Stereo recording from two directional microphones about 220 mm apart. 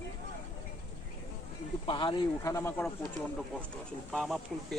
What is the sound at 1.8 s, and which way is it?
Speech, 20° left (ahead or behind).